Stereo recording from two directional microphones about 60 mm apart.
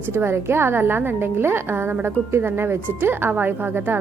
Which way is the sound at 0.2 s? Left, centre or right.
Right.